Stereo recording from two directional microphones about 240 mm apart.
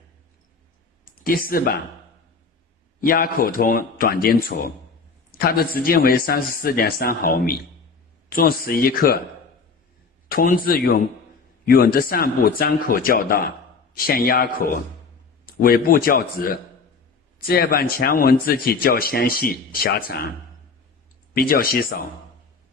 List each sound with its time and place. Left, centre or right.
1.2 s speech: left
3.0 s speech: left
10.2 s speech: left
21.3 s speech: left